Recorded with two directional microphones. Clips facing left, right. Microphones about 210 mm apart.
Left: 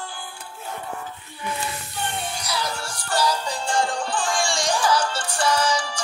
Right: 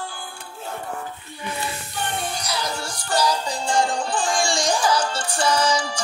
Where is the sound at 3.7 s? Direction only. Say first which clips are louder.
Right 2 dB; 15° right (ahead or behind).